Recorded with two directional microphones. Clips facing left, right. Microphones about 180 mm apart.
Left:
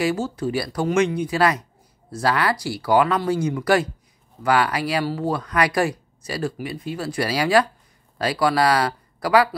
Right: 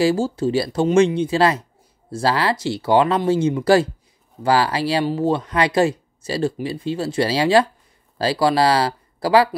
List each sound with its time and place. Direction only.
0.0 s speech: 30° right (ahead or behind)